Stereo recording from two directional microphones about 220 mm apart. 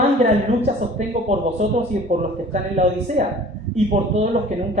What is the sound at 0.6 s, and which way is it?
Speech, 30° right (ahead or behind).